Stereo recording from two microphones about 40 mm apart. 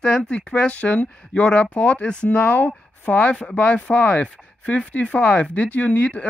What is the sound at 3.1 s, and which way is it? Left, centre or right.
Speech, left.